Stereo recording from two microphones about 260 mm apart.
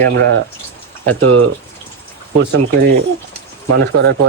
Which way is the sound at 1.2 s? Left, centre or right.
Right.